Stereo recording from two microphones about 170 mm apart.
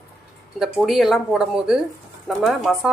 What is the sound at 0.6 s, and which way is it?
Speech, centre (ahead or behind).